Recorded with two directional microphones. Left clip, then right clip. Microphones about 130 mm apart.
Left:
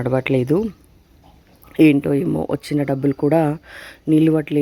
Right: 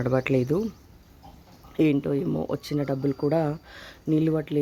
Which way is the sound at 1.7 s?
40° left (ahead or behind).